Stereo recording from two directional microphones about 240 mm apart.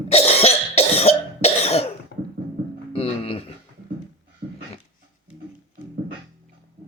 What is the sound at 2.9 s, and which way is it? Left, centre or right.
Music, left.